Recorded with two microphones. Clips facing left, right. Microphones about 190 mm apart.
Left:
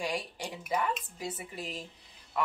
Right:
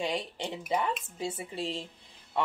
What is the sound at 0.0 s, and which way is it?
A woman's voice, 25° right (ahead or behind).